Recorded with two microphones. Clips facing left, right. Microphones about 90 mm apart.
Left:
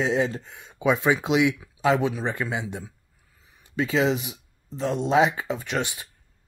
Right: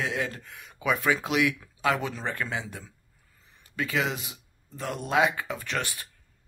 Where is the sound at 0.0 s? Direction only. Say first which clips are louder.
Left 7 dB; 25° left (ahead or behind).